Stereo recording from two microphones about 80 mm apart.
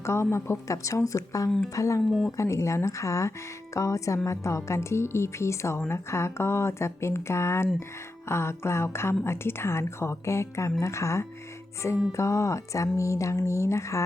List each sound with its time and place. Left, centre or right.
0.0 s a woman's voice: left
1.5 s speech: centre
1.7 s speech: left
2.0 s speech: centre
2.3 s a woman's voice: left